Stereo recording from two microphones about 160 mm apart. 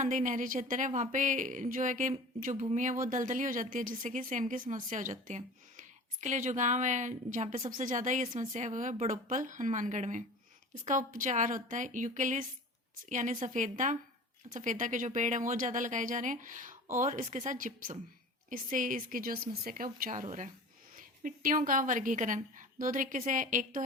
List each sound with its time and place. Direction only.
0.0 s a woman's voice: 50° right (ahead or behind)